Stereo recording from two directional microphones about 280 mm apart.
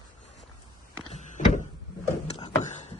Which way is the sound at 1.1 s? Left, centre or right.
Left.